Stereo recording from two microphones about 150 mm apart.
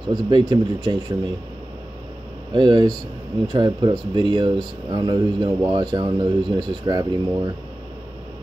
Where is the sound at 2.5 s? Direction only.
30° right (ahead or behind).